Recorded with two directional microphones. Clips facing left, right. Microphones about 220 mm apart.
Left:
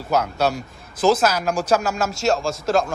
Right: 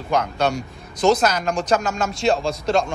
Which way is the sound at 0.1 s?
5° left (ahead or behind).